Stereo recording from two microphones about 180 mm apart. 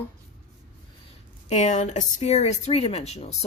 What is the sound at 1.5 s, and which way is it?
Speech, 40° left (ahead or behind).